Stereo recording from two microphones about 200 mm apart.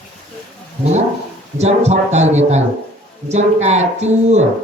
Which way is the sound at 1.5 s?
35° right (ahead or behind).